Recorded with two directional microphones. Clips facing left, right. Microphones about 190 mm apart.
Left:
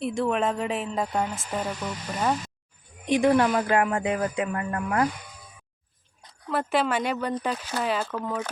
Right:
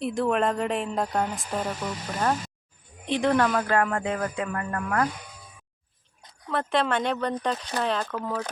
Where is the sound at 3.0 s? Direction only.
10° left (ahead or behind).